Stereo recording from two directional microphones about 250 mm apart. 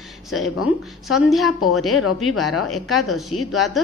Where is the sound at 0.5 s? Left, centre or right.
Left.